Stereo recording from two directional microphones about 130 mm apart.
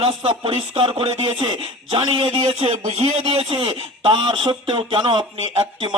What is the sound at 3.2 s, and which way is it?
Speech, 45° right (ahead or behind).